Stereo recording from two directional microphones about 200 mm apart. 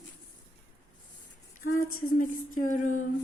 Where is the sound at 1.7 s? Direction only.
40° left (ahead or behind).